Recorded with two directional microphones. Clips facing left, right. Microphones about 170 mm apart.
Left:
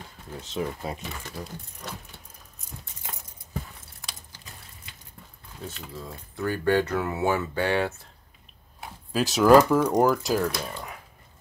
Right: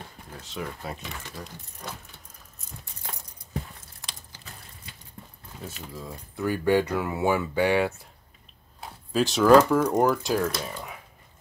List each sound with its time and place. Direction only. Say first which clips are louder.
0.4 s speech: left 5 dB; 20° left (ahead or behind)
1.3 s speech: left 3 dB; 5° left (ahead or behind)
5.7 s speech: right 1 dB; 5° right (ahead or behind)
8.8 s speech: right 2 dB; 5° left (ahead or behind)